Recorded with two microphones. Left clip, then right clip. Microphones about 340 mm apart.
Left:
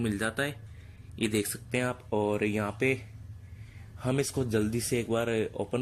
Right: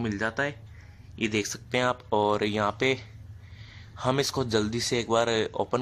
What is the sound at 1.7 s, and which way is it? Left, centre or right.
Speech, right.